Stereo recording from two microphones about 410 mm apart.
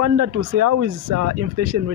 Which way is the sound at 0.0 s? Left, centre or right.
Right.